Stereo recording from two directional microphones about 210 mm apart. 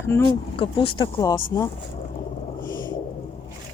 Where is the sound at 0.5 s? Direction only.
25° left (ahead or behind).